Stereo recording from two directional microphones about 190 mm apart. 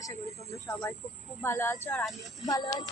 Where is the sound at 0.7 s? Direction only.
15° left (ahead or behind).